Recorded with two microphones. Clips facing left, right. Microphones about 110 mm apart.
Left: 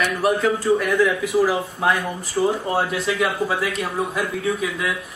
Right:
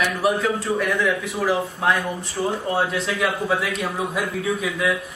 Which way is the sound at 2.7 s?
Centre (ahead or behind).